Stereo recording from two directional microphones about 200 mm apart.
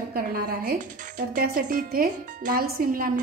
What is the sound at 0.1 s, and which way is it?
A woman's voice, 50° right (ahead or behind).